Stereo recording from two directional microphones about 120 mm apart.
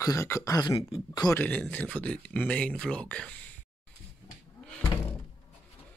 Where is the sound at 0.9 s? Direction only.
40° left (ahead or behind).